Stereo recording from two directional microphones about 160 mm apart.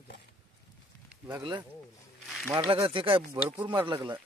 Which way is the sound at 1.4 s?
30° right (ahead or behind).